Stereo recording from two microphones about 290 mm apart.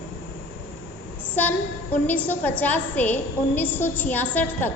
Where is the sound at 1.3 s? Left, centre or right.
Centre.